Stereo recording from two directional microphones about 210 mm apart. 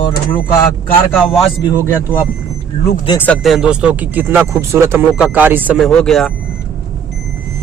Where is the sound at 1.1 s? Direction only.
Centre (ahead or behind).